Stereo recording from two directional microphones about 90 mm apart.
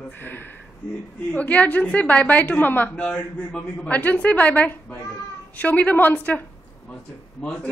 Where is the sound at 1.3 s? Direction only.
15° left (ahead or behind).